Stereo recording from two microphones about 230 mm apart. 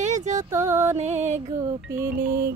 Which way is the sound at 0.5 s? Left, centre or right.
Centre.